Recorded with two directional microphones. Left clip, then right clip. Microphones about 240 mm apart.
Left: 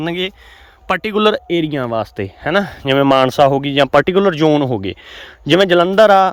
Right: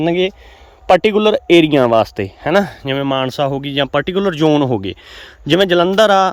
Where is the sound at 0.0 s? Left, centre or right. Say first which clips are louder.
Right 5 dB; centre.